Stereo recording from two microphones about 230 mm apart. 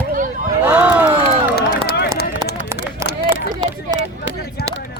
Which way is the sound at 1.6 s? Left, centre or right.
Left.